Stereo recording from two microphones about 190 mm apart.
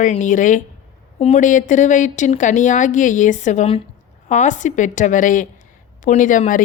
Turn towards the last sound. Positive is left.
turn(degrees=45)  # may be behind; listen again after turning